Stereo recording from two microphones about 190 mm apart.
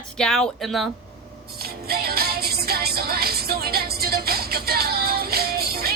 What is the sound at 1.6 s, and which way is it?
Music, 55° right (ahead or behind).